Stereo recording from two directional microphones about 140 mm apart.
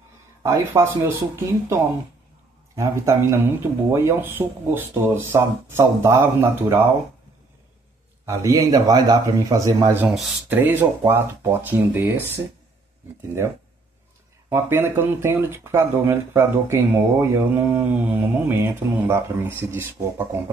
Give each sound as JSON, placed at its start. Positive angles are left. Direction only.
{"t": 0.4, "sound": "speech", "side_deg": -20}
{"t": 8.3, "sound": "speech", "side_deg": -20}
{"t": 14.5, "sound": "speech", "side_deg": -15}